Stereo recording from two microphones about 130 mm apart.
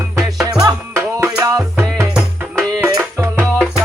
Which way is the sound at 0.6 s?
30° right (ahead or behind).